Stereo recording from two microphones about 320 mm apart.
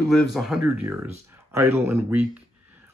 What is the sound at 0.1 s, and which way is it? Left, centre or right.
Speech, centre.